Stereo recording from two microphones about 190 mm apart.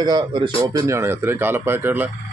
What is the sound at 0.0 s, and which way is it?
A man's voice, 25° right (ahead or behind).